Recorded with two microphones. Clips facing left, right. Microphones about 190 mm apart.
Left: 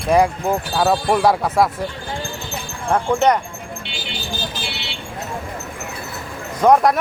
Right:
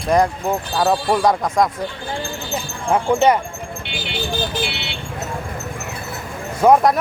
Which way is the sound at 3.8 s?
60° right (ahead or behind).